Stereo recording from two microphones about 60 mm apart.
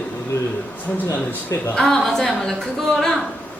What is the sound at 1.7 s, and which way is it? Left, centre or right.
Speech, centre.